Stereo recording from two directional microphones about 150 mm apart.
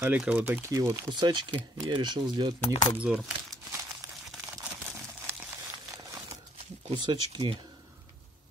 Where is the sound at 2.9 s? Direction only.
10° right (ahead or behind).